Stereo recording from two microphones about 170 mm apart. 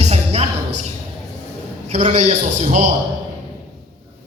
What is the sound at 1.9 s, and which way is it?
A man's voice, 40° right (ahead or behind).